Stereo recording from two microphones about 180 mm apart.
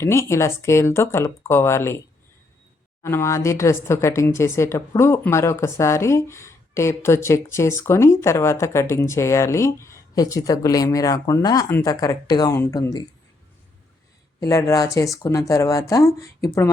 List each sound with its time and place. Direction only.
0.0 s speech: 15° left (ahead or behind)
3.0 s speech: 15° left (ahead or behind)
14.4 s speech: 20° left (ahead or behind)